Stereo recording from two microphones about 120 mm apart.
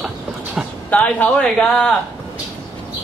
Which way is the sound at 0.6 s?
5° right (ahead or behind).